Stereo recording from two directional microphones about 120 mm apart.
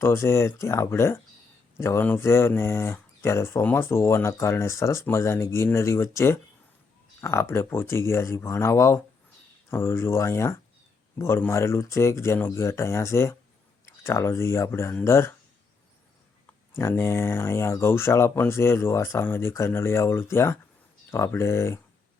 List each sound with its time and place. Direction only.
0.0 s speech: 20° left (ahead or behind)
16.7 s speech: 20° left (ahead or behind)